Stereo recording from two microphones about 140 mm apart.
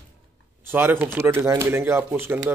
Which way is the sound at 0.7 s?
15° right (ahead or behind).